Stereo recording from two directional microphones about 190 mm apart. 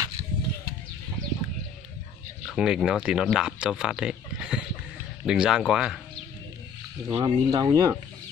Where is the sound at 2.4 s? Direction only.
5° right (ahead or behind).